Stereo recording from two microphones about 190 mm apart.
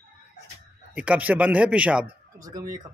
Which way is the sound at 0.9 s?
5° right (ahead or behind).